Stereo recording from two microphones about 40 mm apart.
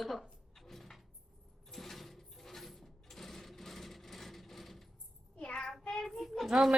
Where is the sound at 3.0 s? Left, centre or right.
Centre.